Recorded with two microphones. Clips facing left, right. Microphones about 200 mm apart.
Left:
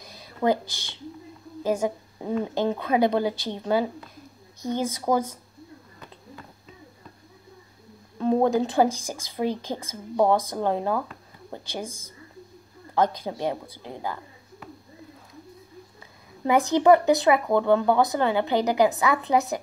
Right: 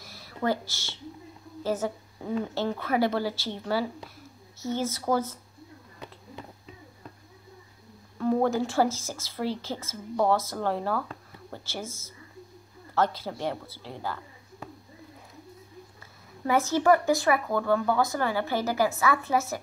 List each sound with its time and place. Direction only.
0.0 s a sound: 15° left (ahead or behind)
1.6 s a woman's voice: 15° left (ahead or behind)
8.2 s a woman's voice: 20° left (ahead or behind)
16.4 s speech: 15° left (ahead or behind)